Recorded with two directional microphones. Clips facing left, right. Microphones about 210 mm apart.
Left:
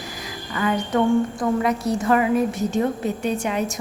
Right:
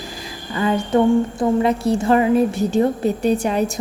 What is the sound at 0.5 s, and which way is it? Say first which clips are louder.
A woman's voice: right 4 dB; 30° right (ahead or behind).